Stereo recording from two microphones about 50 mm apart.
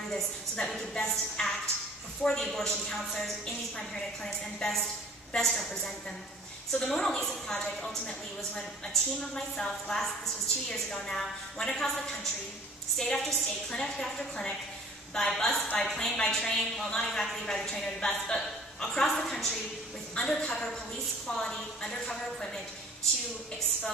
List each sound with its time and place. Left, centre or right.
0.1 s a woman's voice: centre
6.7 s a woman's voice: centre